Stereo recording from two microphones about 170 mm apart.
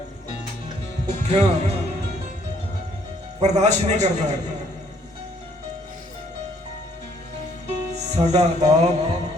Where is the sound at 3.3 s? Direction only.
40° right (ahead or behind).